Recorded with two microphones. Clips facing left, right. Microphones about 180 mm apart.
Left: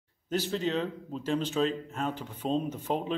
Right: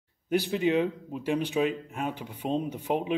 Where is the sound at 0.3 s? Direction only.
15° right (ahead or behind).